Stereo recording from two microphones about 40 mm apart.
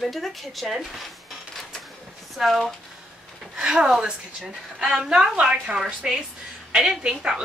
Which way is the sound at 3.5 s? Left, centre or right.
Centre.